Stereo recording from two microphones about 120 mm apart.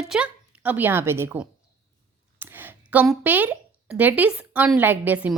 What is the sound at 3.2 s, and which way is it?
A woman's voice, 15° right (ahead or behind).